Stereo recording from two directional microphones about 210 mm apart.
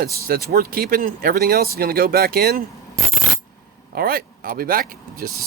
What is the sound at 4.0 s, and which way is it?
Speech, 45° right (ahead or behind).